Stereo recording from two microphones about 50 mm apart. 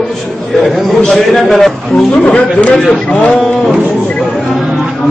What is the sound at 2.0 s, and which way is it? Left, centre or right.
Speech, left.